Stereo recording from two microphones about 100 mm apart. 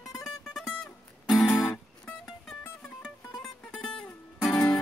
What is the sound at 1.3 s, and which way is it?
Music, centre (ahead or behind).